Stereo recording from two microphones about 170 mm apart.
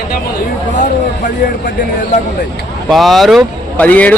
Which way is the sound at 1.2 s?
50° left (ahead or behind).